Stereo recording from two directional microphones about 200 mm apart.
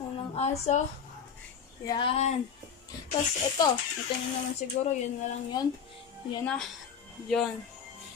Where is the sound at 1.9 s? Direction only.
25° left (ahead or behind).